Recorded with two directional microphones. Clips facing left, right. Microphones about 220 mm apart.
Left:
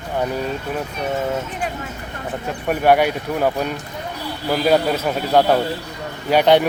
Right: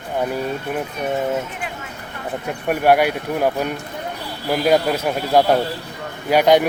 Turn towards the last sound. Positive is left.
turn(degrees=-10)  # may be behind; listen again after turning